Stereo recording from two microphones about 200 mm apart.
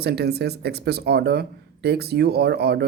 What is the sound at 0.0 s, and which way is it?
Speech, 55° right (ahead or behind).